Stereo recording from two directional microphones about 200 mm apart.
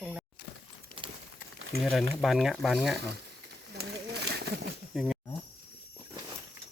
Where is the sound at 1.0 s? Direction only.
25° right (ahead or behind).